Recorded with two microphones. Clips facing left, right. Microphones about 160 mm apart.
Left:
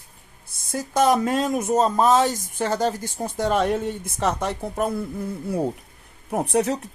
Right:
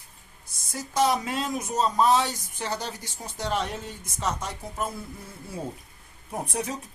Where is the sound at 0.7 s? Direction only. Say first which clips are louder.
Left 5 dB; 50° left (ahead or behind).